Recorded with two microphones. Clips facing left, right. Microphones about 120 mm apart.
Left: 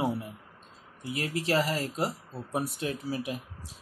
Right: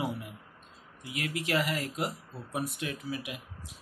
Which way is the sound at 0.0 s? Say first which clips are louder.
Left 4 dB; 30° left (ahead or behind).